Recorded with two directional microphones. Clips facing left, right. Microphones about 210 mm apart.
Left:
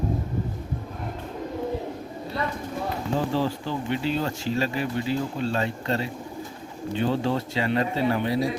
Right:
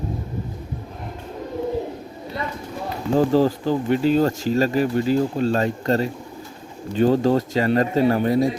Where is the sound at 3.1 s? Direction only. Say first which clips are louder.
Right 9 dB; 40° right (ahead or behind).